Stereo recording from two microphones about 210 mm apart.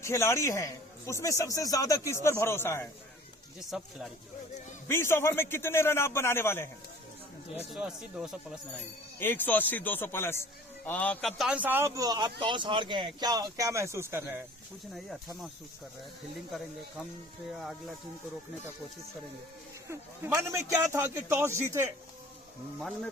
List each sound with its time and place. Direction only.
0.0 s a man's voice: 15° left (ahead or behind)
3.7 s speech: centre (ahead or behind)
4.9 s a man's voice: 10° left (ahead or behind)
7.7 s speech: 5° right (ahead or behind)
9.1 s a man's voice: 10° left (ahead or behind); by 14.4 s 10° right (ahead or behind)
17.5 s speech: centre (ahead or behind)
19.9 s a man's voice: 15° right (ahead or behind)